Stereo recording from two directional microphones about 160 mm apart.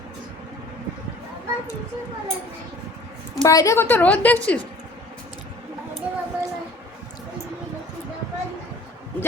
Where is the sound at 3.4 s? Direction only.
20° left (ahead or behind).